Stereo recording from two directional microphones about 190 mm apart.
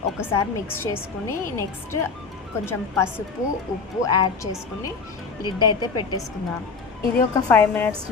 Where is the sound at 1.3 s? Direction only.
15° left (ahead or behind).